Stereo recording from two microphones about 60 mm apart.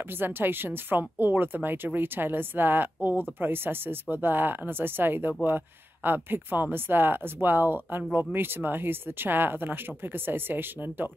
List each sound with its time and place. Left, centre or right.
0.2 s speech: right